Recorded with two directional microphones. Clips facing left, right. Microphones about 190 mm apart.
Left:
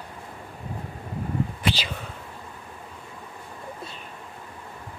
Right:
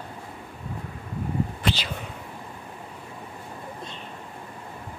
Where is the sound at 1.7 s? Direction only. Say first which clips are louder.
Even; 15° right (ahead or behind).